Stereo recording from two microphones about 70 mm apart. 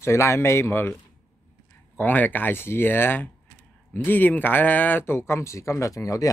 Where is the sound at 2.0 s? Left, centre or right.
Left.